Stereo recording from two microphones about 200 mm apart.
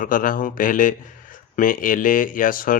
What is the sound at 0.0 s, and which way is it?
Speech, 45° left (ahead or behind).